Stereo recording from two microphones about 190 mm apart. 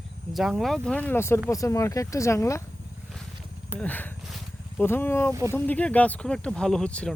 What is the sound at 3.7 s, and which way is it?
Speech, 10° left (ahead or behind).